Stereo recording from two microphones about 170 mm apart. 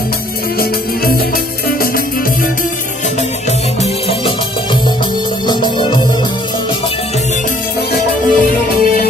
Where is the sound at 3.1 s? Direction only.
40° left (ahead or behind).